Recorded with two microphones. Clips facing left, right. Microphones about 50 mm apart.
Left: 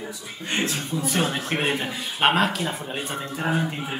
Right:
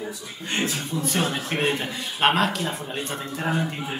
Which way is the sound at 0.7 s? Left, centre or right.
Centre.